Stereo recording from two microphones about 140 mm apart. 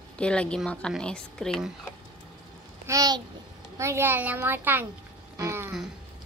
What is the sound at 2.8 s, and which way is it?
A child's voice, 25° right (ahead or behind).